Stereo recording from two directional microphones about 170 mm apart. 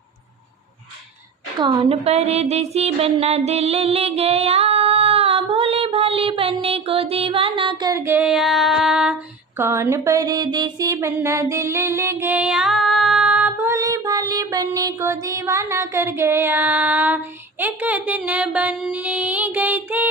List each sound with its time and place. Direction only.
1.5 s a woman's voice: 30° right (ahead or behind); by 9.1 s 5° right (ahead or behind)
9.6 s mantra: 15° right (ahead or behind)
17.6 s a sound: 10° right (ahead or behind)